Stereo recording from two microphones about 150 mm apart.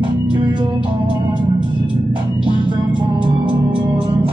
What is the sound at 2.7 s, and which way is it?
Music, 30° right (ahead or behind).